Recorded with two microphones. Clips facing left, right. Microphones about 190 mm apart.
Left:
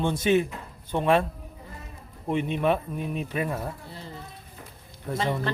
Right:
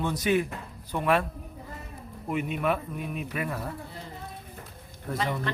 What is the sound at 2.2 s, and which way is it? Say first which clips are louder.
Speech: left 3 dB; 30° left (ahead or behind).